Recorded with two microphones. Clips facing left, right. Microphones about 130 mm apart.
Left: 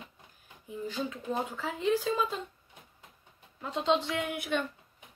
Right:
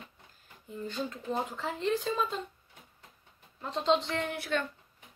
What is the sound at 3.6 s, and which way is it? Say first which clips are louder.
Speech: even; centre (ahead or behind).